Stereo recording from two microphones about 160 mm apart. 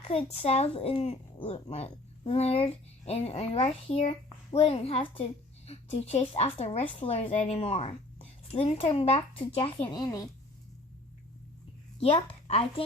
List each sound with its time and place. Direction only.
0.1 s a child's voice: 40° left (ahead or behind); by 10.2 s 25° left (ahead or behind)
11.9 s a woman's voice: 35° left (ahead or behind)